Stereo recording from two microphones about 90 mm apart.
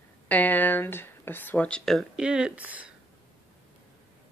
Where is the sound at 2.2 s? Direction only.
10° right (ahead or behind).